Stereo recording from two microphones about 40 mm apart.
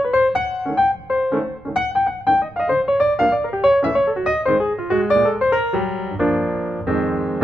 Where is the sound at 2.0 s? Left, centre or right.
Right.